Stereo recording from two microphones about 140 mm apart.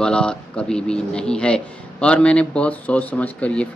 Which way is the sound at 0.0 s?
5° left (ahead or behind).